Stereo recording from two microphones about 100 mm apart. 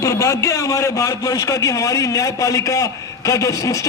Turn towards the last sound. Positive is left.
turn(degrees=30)  # may be behind; listen again after turning